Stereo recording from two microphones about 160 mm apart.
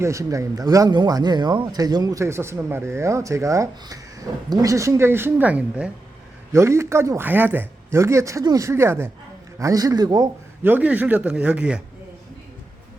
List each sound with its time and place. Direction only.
0.0 s speech: 20° right (ahead or behind)
10.6 s speech: 10° right (ahead or behind)